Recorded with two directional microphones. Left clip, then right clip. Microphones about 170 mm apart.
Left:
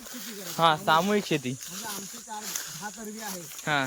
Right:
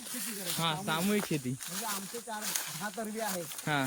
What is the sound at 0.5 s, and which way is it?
Speech, 20° left (ahead or behind).